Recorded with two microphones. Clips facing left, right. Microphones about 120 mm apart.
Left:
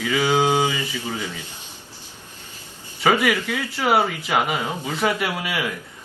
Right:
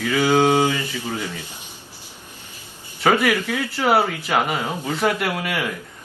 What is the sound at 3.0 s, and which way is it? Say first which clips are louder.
Speech: right 1 dB; centre (ahead or behind).